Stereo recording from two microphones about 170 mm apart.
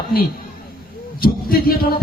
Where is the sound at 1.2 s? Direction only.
60° left (ahead or behind).